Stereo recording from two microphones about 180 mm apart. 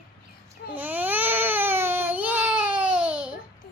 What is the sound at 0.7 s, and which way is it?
Baby cry, 10° right (ahead or behind).